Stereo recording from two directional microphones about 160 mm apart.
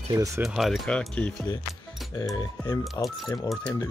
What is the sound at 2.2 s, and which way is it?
Speech, 25° left (ahead or behind).